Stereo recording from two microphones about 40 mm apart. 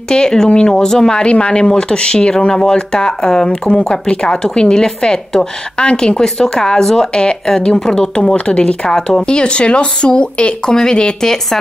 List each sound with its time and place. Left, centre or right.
0.1 s speech: centre
8.8 s speech: centre
9.4 s speech: left